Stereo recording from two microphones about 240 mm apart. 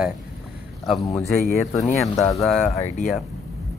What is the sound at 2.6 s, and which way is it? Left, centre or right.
Speech, left.